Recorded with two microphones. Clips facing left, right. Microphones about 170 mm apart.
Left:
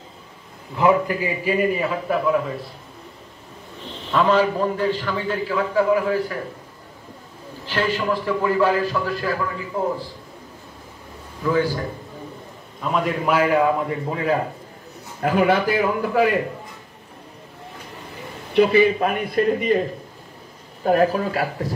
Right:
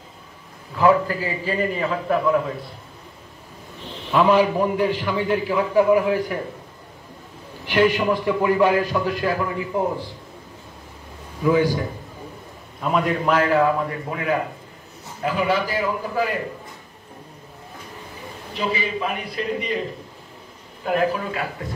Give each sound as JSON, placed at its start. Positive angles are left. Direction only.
{"t": 0.7, "sound": "a man's voice", "side_deg": 20}
{"t": 4.1, "sound": "a man's voice", "side_deg": -10}
{"t": 7.6, "sound": "a man's voice", "side_deg": -15}
{"t": 11.4, "sound": "a man's voice", "side_deg": -15}
{"t": 12.8, "sound": "a man's voice", "side_deg": 0}
{"t": 14.1, "sound": "speech", "side_deg": 30}
{"t": 15.2, "sound": "a man's voice", "side_deg": 55}
{"t": 18.5, "sound": "a man's voice", "side_deg": 60}
{"t": 20.8, "sound": "speech", "side_deg": 40}